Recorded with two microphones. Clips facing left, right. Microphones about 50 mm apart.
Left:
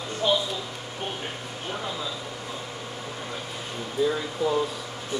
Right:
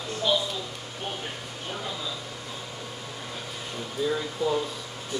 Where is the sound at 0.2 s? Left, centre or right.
Left.